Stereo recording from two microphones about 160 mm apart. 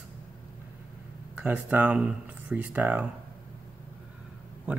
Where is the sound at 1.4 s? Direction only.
10° right (ahead or behind).